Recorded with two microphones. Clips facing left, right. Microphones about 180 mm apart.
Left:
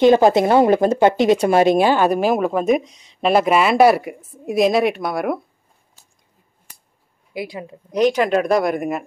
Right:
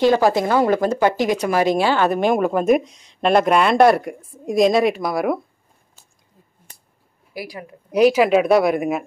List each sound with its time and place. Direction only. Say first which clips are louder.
0.0 s speech: left 3 dB; 20° left (ahead or behind); by 5.4 s centre (ahead or behind)
7.3 s a woman's voice: left 4 dB; 25° left (ahead or behind)
7.9 s speech: right 2 dB; 5° right (ahead or behind)